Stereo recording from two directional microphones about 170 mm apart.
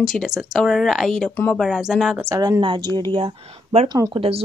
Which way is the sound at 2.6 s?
30° right (ahead or behind).